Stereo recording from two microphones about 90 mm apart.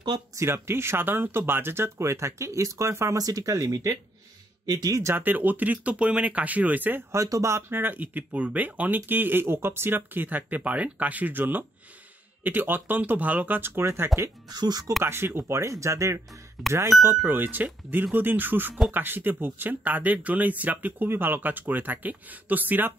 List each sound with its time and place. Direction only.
0.4 s speech: 30° right (ahead or behind)
5.1 s speech: 20° right (ahead or behind)
7.1 s speech: 35° right (ahead or behind)
14.5 s speech: 45° right (ahead or behind)
15.0 s speech: 25° right (ahead or behind)